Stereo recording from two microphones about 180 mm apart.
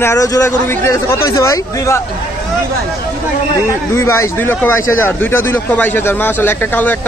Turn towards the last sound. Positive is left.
turn(degrees=10)  # may be behind; listen again after turning